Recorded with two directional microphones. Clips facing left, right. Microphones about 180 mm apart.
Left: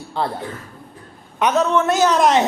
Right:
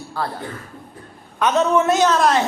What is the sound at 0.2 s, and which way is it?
Speech, 20° left (ahead or behind).